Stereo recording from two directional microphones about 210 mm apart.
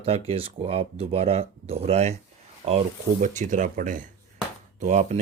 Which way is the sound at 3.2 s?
35° right (ahead or behind).